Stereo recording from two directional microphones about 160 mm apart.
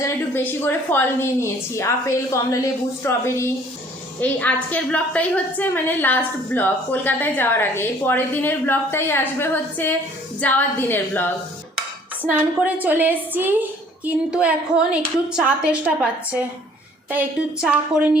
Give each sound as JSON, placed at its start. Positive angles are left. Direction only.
{"t": 0.0, "sound": "a woman's voice", "side_deg": 15}
{"t": 12.2, "sound": "a woman's voice", "side_deg": -10}